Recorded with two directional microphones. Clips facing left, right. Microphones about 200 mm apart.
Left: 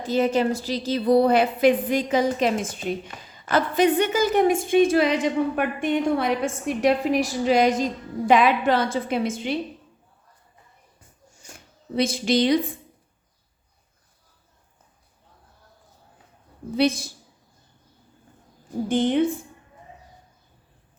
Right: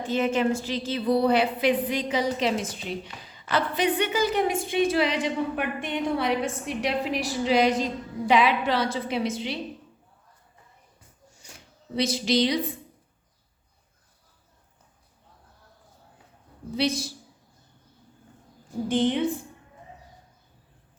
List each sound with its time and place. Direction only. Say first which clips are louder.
0.0 s a woman's voice: left 3 dB; 40° left (ahead or behind)
11.9 s a woman's voice: left 2 dB; 50° left (ahead or behind)
16.7 s a woman's voice: left 5 dB; 50° left (ahead or behind)
18.9 s a woman's voice: left 2 dB; 50° left (ahead or behind)